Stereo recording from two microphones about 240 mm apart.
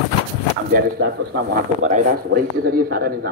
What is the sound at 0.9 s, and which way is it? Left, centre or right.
Speech, right.